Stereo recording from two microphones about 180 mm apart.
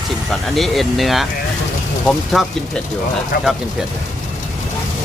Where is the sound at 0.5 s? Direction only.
Centre (ahead or behind).